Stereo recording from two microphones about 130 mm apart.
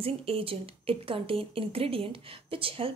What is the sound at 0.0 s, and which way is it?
A woman's voice, 45° right (ahead or behind).